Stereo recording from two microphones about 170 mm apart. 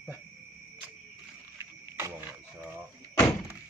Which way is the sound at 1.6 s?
15° right (ahead or behind).